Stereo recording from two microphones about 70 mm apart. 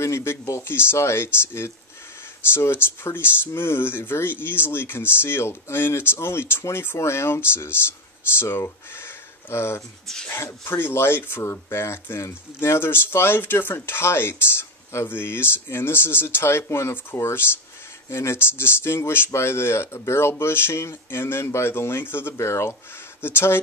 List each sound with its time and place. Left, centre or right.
0.0 s speech: left